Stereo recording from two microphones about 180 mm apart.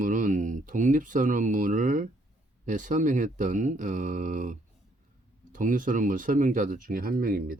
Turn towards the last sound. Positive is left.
turn(degrees=-55)  # may be behind; listen again after turning